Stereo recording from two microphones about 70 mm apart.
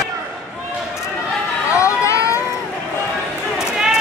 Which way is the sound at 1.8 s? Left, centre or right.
Left.